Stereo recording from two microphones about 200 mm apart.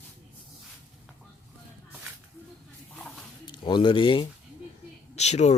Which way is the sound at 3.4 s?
25° left (ahead or behind).